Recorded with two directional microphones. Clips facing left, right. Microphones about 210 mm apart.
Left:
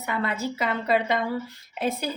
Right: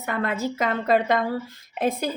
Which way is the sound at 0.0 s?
50° right (ahead or behind).